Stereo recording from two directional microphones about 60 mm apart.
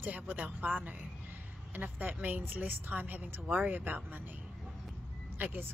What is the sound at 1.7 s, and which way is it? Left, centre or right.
Speech, right.